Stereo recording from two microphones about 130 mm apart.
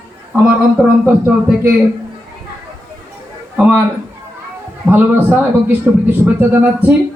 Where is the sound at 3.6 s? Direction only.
15° right (ahead or behind).